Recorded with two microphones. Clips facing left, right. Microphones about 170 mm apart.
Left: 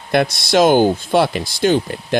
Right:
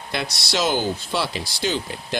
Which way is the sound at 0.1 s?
50° left (ahead or behind).